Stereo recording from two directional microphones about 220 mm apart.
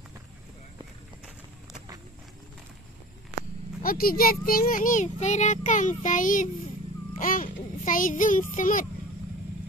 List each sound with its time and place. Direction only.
3.8 s a child's voice: 40° left (ahead or behind)